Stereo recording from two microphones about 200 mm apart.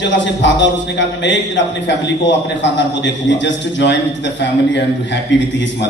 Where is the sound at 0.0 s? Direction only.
65° left (ahead or behind).